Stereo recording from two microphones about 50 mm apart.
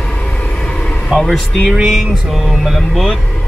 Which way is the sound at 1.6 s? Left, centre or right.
Centre.